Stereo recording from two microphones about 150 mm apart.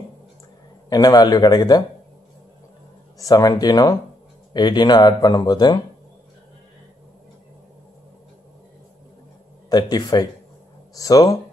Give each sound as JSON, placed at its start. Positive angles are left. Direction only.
{"t": 0.8, "sound": "speech", "side_deg": 25}
{"t": 3.2, "sound": "speech", "side_deg": 25}
{"t": 9.7, "sound": "speech", "side_deg": 25}